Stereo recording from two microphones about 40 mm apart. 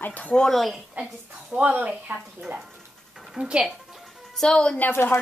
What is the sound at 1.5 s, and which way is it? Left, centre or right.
Speech, right.